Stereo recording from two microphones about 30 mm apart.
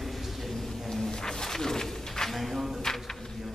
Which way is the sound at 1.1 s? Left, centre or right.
Centre.